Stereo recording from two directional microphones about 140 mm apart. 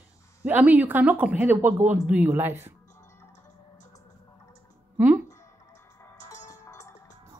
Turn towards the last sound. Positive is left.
turn(degrees=25)  # may be behind; listen again after turning